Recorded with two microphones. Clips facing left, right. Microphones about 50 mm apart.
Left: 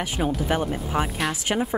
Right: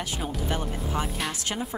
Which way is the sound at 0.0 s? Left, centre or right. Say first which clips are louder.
Left 6 dB; left.